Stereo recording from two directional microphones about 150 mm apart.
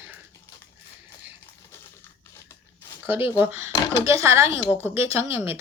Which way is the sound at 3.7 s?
30° left (ahead or behind).